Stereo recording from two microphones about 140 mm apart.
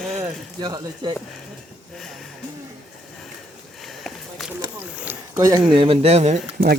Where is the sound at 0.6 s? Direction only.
30° right (ahead or behind).